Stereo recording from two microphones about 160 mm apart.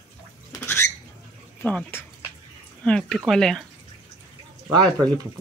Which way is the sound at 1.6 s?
10° left (ahead or behind).